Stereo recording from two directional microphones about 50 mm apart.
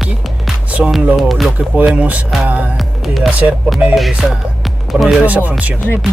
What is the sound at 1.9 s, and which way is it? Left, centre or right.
Music, right.